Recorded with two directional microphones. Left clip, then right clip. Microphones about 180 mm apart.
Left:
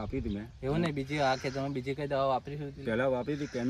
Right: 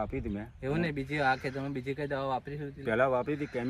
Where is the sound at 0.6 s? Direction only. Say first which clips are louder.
Even; 20° left (ahead or behind).